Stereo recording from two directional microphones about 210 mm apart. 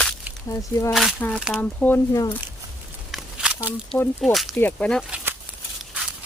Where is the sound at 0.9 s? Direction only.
Centre (ahead or behind); by 2.3 s 15° left (ahead or behind).